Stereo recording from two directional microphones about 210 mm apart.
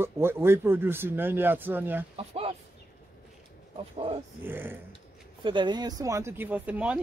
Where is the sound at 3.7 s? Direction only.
25° right (ahead or behind).